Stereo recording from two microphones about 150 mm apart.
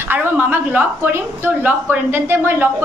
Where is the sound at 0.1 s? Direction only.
15° right (ahead or behind).